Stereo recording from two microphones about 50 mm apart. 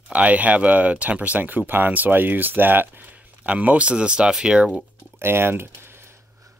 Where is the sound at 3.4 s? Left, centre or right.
Right.